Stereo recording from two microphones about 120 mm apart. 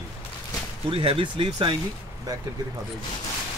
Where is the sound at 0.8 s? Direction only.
50° right (ahead or behind).